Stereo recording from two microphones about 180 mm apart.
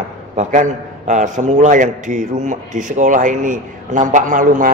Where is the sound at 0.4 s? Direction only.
40° right (ahead or behind).